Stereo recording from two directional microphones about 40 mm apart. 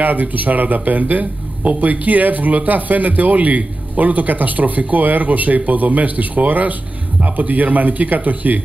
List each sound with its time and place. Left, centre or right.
0.0 s speech: right